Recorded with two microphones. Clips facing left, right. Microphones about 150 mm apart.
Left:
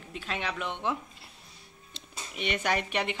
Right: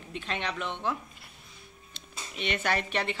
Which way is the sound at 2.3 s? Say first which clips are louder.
Even; 10° left (ahead or behind).